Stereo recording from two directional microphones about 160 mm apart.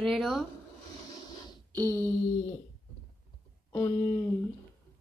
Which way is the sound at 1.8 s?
15° left (ahead or behind).